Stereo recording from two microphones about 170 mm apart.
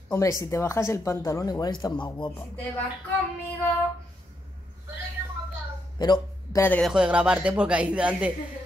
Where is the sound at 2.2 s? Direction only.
10° left (ahead or behind).